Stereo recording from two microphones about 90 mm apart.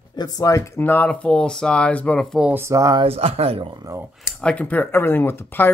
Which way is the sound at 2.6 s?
35° right (ahead or behind).